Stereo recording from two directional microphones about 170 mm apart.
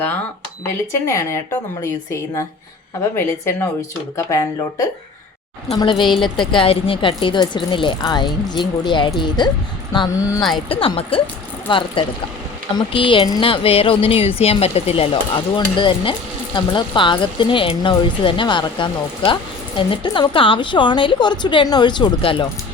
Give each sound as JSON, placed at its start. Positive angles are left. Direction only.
{"t": 1.0, "sound": "speech", "side_deg": 15}
{"t": 10.7, "sound": "a woman's voice", "side_deg": 30}
{"t": 12.9, "sound": "a woman's voice", "side_deg": 30}